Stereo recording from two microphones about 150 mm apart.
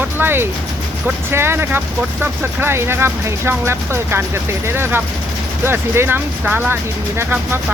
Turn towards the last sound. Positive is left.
turn(degrees=-15)  # may be behind; listen again after turning